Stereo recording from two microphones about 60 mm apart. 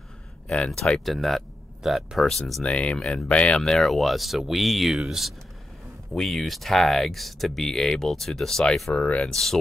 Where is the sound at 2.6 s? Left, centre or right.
Centre.